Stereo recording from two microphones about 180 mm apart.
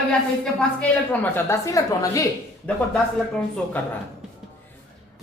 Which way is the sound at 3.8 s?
10° left (ahead or behind).